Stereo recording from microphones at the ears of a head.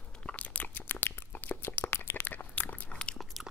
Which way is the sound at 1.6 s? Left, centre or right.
Left.